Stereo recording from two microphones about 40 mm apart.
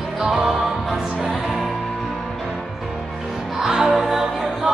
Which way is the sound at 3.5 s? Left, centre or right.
Centre.